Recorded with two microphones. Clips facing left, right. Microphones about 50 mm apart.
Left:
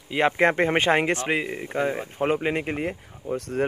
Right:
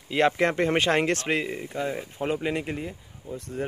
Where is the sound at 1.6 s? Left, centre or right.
Left.